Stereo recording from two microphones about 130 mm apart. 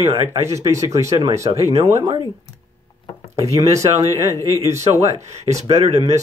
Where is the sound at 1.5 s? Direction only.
55° right (ahead or behind).